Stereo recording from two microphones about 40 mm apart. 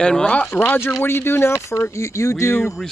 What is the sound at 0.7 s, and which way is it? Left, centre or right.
Speech, left.